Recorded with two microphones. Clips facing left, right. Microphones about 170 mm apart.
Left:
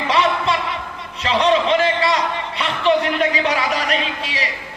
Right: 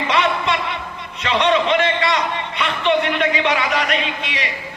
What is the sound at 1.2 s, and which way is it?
A man's voice, 35° left (ahead or behind).